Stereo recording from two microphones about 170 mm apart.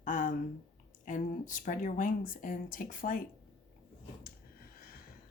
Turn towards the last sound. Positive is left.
turn(degrees=60)  # may be behind; listen again after turning